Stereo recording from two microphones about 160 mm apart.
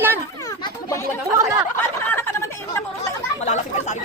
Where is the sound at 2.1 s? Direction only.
15° left (ahead or behind).